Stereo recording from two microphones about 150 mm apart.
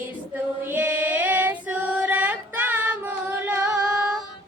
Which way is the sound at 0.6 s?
10° right (ahead or behind).